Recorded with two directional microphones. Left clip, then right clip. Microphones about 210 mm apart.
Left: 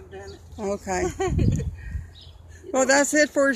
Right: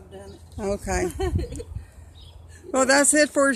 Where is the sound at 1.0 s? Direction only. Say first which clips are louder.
Left 2 dB; 30° right (ahead or behind).